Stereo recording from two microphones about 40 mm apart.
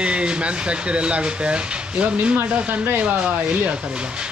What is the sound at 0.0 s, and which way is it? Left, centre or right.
Speech, right.